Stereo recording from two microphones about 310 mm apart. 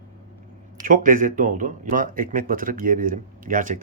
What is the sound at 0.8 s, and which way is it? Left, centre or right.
Speech, right.